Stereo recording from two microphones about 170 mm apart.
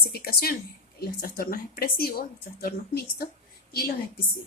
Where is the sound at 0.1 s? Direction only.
65° left (ahead or behind).